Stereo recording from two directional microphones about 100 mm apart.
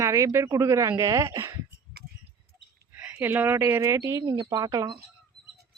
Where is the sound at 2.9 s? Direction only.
15° right (ahead or behind).